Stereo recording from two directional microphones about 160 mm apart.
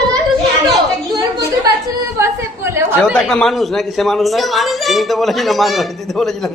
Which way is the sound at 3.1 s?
5° left (ahead or behind).